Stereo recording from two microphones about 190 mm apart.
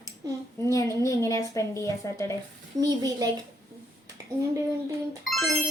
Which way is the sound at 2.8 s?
20° right (ahead or behind).